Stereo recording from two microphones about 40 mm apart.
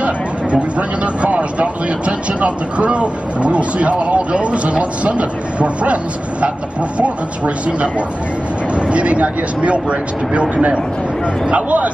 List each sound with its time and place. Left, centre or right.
0.0 s speech: right